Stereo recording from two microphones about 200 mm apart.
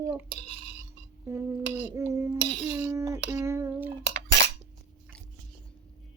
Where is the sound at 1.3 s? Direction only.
15° right (ahead or behind).